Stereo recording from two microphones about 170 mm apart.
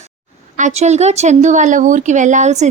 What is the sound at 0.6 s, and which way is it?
A woman's voice, 40° right (ahead or behind).